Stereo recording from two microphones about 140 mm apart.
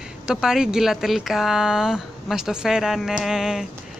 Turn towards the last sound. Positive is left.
turn(degrees=-5)  # may be behind; listen again after turning